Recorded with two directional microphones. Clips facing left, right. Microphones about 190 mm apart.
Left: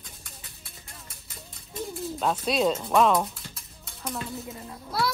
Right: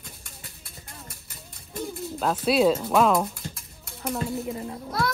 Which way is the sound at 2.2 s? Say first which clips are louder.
Right 4 dB; 5° right (ahead or behind).